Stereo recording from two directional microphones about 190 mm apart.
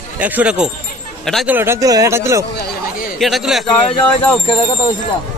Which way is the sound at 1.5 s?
10° right (ahead or behind).